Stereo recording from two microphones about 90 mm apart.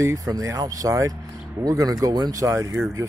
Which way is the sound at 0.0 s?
40° right (ahead or behind).